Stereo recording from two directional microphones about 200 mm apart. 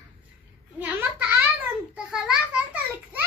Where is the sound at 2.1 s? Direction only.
5° right (ahead or behind).